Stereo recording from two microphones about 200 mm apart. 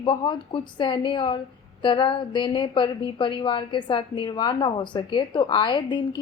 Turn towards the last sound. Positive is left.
turn(degrees=20)  # may be behind; listen again after turning